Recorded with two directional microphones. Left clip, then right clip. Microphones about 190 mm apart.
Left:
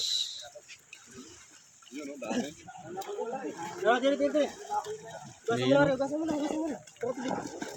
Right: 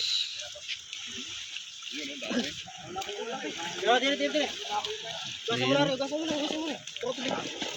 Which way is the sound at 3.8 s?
60° left (ahead or behind).